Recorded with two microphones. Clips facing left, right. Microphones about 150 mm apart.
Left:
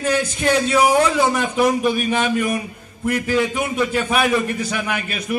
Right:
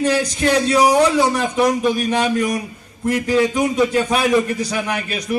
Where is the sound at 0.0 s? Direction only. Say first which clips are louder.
Right 2 dB; 35° right (ahead or behind).